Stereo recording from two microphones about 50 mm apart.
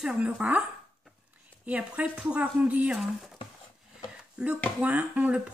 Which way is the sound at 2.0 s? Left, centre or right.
Right.